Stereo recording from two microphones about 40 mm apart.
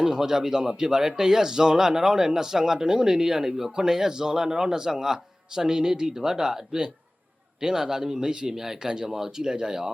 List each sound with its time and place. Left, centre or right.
0.0 s speech: centre